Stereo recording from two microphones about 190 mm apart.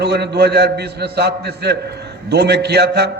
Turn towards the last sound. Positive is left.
turn(degrees=-60)  # may be behind; listen again after turning